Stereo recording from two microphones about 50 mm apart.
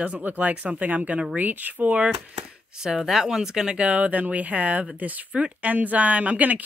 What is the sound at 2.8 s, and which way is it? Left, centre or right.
Speech, centre.